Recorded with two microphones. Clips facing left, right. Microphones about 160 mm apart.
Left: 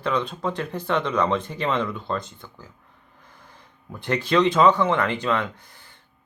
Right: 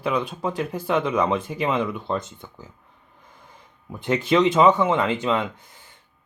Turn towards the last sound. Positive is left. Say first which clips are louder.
# right 1 dB
turn(degrees=-20)  # may be behind; listen again after turning